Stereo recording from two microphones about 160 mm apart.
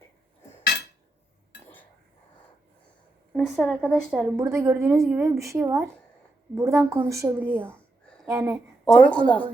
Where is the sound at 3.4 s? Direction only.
5° left (ahead or behind).